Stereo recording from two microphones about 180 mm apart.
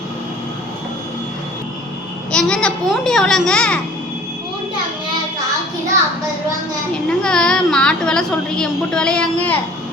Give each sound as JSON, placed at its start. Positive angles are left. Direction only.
{"t": 2.3, "sound": "a woman's voice", "side_deg": 5}
{"t": 7.2, "sound": "a woman's voice", "side_deg": 5}